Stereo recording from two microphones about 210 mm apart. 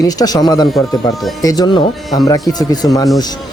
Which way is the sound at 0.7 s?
Centre (ahead or behind).